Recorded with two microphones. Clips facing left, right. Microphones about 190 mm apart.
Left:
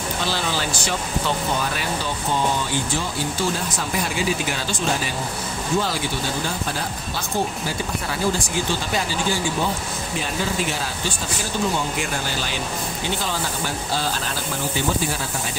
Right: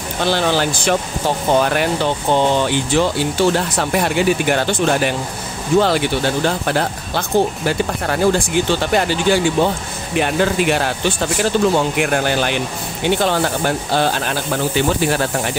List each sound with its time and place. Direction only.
0.2 s speech: 60° right (ahead or behind)